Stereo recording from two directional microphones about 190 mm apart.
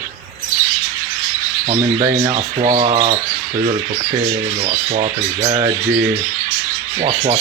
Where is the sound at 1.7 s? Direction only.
25° right (ahead or behind).